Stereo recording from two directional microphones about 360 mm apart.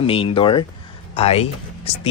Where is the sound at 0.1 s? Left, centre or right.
Centre.